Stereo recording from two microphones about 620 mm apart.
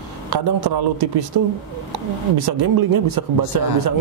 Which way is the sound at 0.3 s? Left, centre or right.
Right.